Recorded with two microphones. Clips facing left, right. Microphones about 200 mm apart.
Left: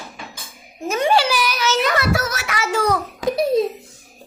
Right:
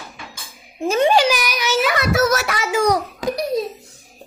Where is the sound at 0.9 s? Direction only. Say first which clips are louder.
Right 4 dB; 25° right (ahead or behind).